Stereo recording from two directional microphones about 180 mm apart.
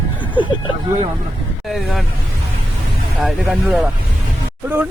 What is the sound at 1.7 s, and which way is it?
Speech, centre (ahead or behind).